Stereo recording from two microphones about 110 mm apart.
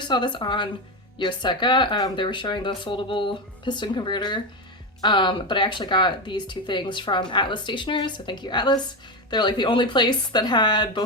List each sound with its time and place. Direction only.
0.0 s speech: 45° left (ahead or behind)